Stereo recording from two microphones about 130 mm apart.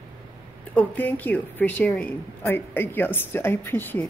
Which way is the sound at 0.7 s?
15° left (ahead or behind).